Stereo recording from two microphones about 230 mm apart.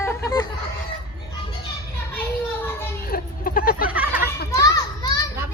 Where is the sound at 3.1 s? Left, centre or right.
Left.